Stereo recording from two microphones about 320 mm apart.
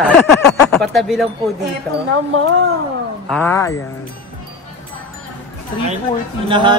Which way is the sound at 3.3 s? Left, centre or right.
Centre.